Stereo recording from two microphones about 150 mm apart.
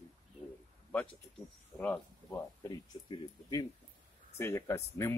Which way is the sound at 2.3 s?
30° left (ahead or behind).